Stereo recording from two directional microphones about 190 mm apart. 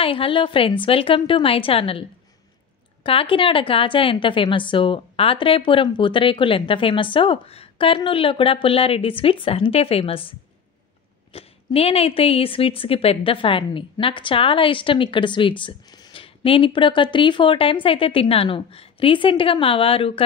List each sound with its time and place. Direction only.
0.0 s a woman's voice: 30° left (ahead or behind)
11.3 s a woman's voice: 30° left (ahead or behind)